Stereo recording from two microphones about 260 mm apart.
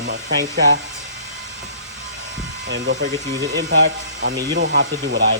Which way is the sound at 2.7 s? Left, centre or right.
Right.